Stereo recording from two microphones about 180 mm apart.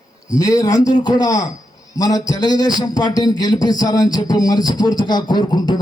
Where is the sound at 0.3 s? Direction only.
20° left (ahead or behind).